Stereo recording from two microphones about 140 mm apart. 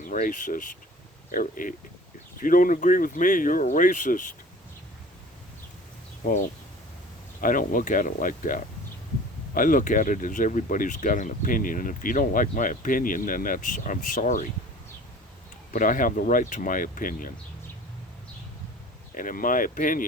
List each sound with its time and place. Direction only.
0.1 s speech: 70° left (ahead or behind)
7.4 s speech: 75° left (ahead or behind)
15.7 s speech: 70° left (ahead or behind)
19.1 s speech: 80° left